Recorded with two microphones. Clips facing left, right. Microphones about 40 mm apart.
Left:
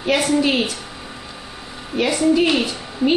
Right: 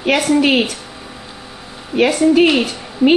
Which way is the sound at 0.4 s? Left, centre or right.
Right.